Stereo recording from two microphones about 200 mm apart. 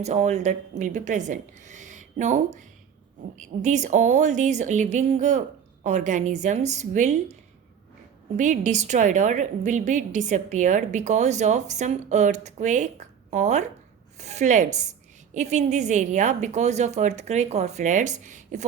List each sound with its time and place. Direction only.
0.0 s a woman's voice: 35° right (ahead or behind)
8.4 s a woman's voice: 40° right (ahead or behind)